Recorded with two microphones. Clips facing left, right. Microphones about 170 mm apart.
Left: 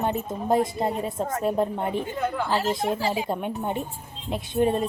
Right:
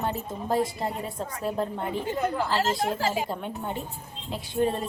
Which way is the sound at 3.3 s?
20° left (ahead or behind).